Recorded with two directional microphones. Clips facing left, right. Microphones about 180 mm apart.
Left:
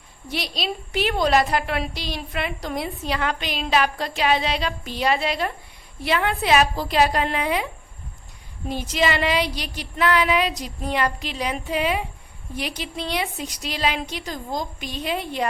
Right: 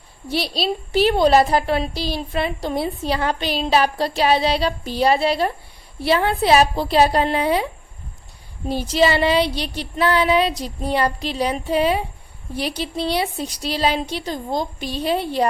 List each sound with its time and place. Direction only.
0.3 s a woman's voice: 30° right (ahead or behind)